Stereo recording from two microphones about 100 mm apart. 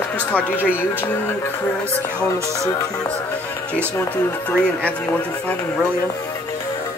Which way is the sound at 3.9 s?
15° left (ahead or behind).